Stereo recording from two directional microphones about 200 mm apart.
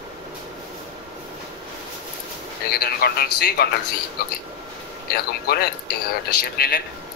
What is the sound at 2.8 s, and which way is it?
Speech, 50° left (ahead or behind).